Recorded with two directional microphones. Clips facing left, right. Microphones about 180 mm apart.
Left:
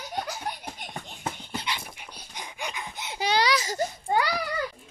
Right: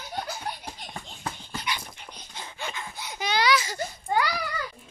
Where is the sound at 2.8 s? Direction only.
20° left (ahead or behind).